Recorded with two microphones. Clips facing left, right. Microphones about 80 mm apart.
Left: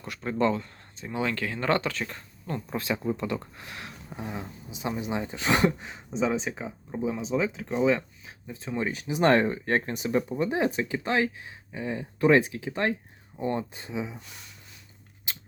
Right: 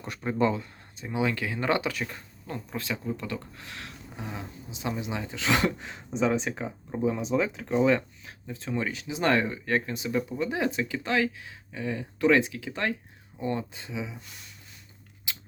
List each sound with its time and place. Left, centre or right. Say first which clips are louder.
0.0 s speech: even; centre
2.7 s speech: left 4 dB; centre
5.9 s speech: right 1 dB; centre
8.8 s speech: left 5 dB; left